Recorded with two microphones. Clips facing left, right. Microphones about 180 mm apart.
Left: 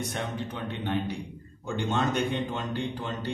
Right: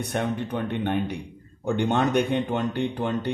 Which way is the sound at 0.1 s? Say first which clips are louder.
Right 7 dB; 55° right (ahead or behind).